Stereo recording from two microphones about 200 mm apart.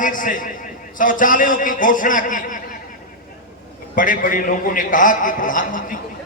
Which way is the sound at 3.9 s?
40° left (ahead or behind).